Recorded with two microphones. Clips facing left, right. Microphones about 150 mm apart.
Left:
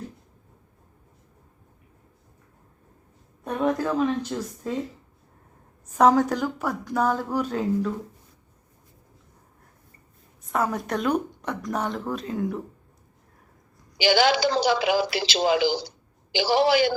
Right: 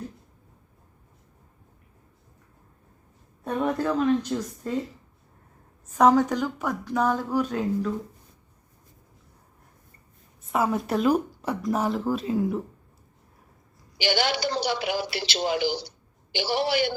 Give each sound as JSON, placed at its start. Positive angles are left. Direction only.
{"t": 3.4, "sound": "speech", "side_deg": 0}
{"t": 5.9, "sound": "speech", "side_deg": 10}
{"t": 10.5, "sound": "speech", "side_deg": 0}
{"t": 14.0, "sound": "a woman's voice", "side_deg": 90}